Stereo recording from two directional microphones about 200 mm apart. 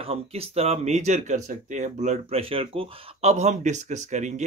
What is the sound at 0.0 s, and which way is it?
Speech, 30° right (ahead or behind).